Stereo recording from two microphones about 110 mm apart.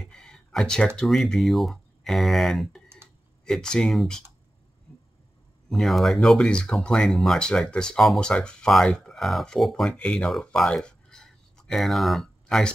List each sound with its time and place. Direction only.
0.0 s speech: 5° left (ahead or behind)
3.0 s computer keyboard: 20° right (ahead or behind)
3.4 s speech: 5° left (ahead or behind)
5.7 s speech: centre (ahead or behind)